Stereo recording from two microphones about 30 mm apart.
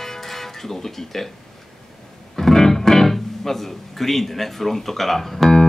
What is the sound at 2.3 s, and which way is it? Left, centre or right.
Speech, centre.